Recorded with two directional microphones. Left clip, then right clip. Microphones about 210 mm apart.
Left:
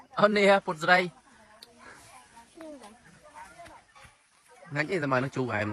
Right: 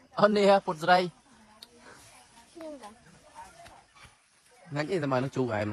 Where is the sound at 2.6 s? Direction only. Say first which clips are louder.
Right 3 dB; centre (ahead or behind).